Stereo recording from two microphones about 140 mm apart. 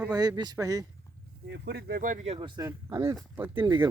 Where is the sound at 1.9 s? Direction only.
75° right (ahead or behind).